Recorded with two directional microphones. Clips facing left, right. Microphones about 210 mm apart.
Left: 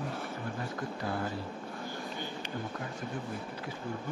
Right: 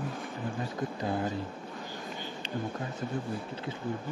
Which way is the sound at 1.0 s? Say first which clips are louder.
Right 4 dB; 20° right (ahead or behind).